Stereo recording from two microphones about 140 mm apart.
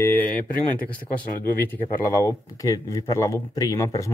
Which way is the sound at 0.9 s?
15° left (ahead or behind).